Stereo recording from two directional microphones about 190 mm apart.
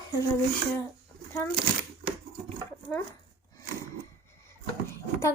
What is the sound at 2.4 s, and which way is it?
Dog, 10° left (ahead or behind).